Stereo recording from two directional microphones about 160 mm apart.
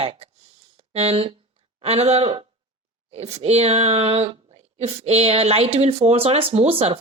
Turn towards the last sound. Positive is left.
turn(degrees=-40)  # may be behind; listen again after turning